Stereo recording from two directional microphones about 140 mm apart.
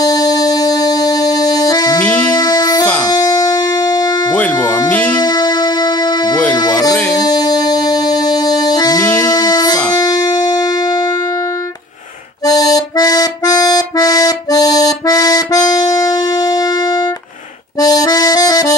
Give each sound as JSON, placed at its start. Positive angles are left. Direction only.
{"t": 0.0, "sound": "music", "side_deg": 25}
{"t": 2.0, "sound": "music", "side_deg": 10}
{"t": 2.3, "sound": "music", "side_deg": 25}
{"t": 2.8, "sound": "music", "side_deg": 10}
{"t": 3.1, "sound": "music", "side_deg": 25}
{"t": 4.3, "sound": "music", "side_deg": 10}
{"t": 5.1, "sound": "music", "side_deg": 30}
{"t": 12.4, "sound": "accordion", "side_deg": 25}
{"t": 16.5, "sound": "music", "side_deg": 25}
{"t": 17.7, "sound": "accordion", "side_deg": 25}